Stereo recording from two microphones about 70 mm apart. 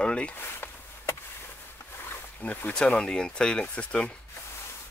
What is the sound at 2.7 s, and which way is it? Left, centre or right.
Speech, centre.